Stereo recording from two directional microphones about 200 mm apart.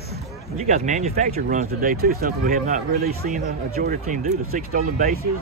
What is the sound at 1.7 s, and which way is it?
Speech, 50° right (ahead or behind).